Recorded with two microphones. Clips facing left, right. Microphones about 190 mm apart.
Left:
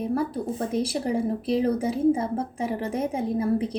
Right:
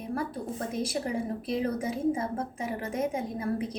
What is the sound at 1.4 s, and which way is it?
A woman's voice, 35° left (ahead or behind).